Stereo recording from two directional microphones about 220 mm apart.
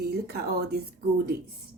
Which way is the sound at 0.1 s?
45° right (ahead or behind).